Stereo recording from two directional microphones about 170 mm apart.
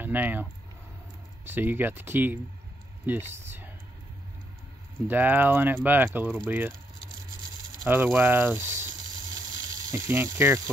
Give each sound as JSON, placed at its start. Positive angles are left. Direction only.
{"t": 0.0, "sound": "speech", "side_deg": -10}
{"t": 5.0, "sound": "speech", "side_deg": -10}
{"t": 7.9, "sound": "speech", "side_deg": -10}
{"t": 10.0, "sound": "speech", "side_deg": -15}